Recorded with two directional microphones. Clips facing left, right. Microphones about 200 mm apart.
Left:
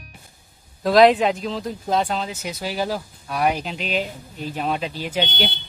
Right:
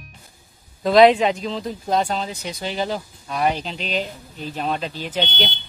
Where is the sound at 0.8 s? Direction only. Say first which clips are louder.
Right 1 dB; centre (ahead or behind).